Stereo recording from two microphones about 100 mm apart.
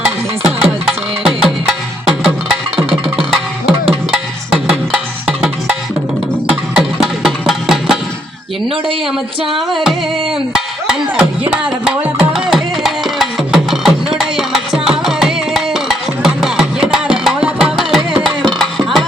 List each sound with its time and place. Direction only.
0.0 s music: 5° right (ahead or behind)
5.2 s music: 10° right (ahead or behind)
9.6 s music: centre (ahead or behind)
11.2 s music: 10° right (ahead or behind)